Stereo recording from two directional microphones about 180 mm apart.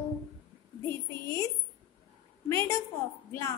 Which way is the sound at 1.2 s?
15° left (ahead or behind).